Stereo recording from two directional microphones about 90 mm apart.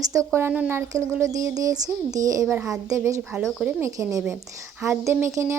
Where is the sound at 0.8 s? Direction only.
35° right (ahead or behind).